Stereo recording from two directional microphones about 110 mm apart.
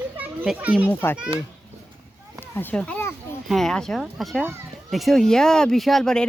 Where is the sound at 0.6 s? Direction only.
15° right (ahead or behind).